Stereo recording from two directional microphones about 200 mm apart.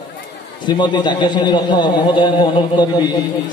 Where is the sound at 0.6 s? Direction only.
20° left (ahead or behind).